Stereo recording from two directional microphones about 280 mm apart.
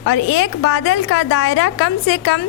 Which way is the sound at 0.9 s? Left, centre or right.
Left.